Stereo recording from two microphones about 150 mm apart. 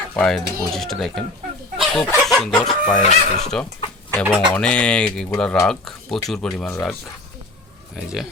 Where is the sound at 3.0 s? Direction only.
50° left (ahead or behind).